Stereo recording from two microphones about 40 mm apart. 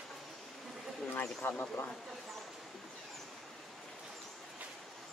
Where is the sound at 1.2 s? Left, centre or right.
Left.